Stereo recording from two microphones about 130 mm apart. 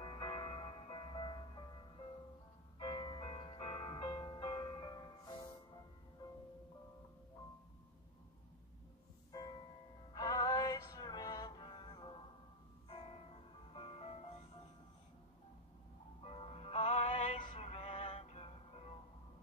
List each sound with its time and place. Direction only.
0.0 s music: 40° left (ahead or behind)
2.8 s music: 35° left (ahead or behind)
9.3 s music: 30° left (ahead or behind); by 14.3 s 50° left (ahead or behind)
16.2 s music: 50° left (ahead or behind); by 17.3 s 65° left (ahead or behind)
17.3 s a sound: 40° left (ahead or behind)
17.6 s music: 50° left (ahead or behind)